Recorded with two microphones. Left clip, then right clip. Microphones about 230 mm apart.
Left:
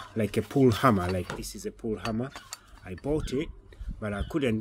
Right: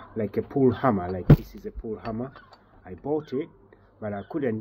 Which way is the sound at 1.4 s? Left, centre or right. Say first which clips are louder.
Left 2 dB; left.